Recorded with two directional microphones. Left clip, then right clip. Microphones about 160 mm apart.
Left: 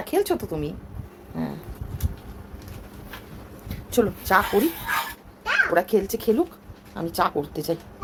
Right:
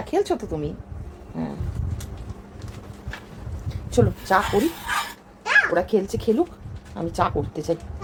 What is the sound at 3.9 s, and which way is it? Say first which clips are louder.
Speech: right 1 dB; 10° left (ahead or behind).